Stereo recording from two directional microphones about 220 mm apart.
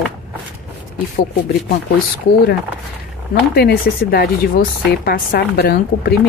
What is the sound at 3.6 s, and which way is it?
Speech, 45° left (ahead or behind).